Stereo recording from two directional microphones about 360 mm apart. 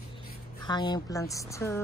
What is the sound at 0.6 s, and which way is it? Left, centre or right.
Speech, centre.